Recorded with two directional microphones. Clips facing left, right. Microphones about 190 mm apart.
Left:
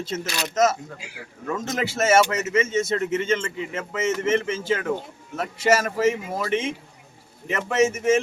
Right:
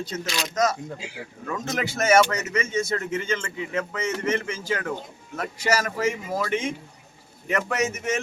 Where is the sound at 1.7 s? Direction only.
25° left (ahead or behind).